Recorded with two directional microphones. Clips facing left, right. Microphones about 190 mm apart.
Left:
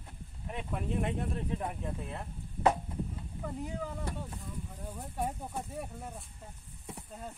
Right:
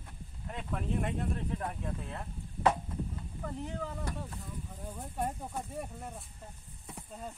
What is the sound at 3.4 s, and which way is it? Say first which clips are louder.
Speech: left 1 dB; 10° left (ahead or behind).